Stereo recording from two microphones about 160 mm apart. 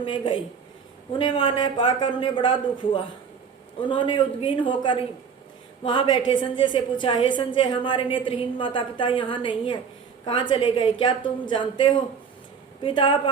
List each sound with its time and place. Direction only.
0.0 s a woman's voice: 30° left (ahead or behind)